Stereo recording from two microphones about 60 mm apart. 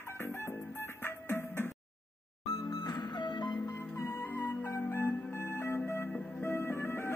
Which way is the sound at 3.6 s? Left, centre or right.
Left.